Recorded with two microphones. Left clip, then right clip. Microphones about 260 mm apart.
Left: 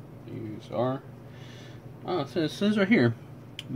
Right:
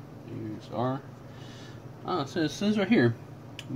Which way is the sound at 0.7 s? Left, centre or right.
Centre.